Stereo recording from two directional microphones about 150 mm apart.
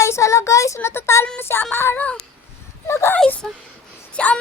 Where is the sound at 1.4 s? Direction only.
15° left (ahead or behind).